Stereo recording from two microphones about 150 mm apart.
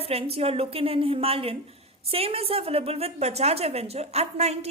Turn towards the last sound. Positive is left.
turn(degrees=-45)  # may be behind; listen again after turning